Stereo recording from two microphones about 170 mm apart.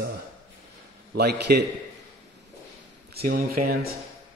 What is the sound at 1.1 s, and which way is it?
Speech, 75° right (ahead or behind).